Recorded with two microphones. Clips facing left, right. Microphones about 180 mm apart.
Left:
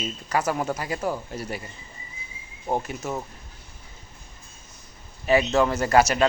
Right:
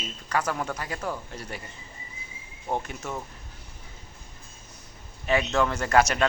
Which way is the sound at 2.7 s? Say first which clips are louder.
Left 3 dB; 5° left (ahead or behind).